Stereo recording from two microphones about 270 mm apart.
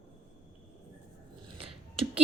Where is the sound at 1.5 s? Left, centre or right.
Right.